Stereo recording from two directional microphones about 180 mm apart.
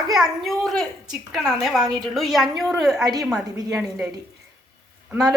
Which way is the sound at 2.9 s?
20° right (ahead or behind).